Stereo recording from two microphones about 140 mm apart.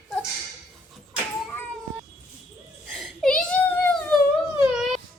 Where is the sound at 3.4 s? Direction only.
10° left (ahead or behind).